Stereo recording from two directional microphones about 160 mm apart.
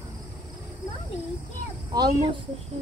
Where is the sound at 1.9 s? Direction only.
25° right (ahead or behind).